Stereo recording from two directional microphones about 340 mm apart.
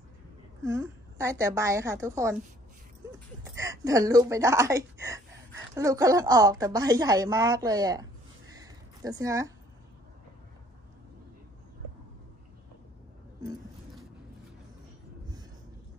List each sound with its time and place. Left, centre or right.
0.7 s a woman's voice: centre
3.5 s a woman's voice: centre
8.5 s a sound: centre